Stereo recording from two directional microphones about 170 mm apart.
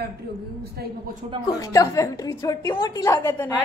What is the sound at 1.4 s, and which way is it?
A woman's voice, 20° left (ahead or behind).